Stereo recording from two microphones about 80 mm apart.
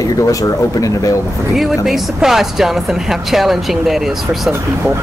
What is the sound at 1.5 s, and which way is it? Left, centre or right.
Speech, centre.